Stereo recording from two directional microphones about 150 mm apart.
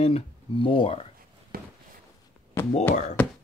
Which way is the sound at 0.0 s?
40° left (ahead or behind).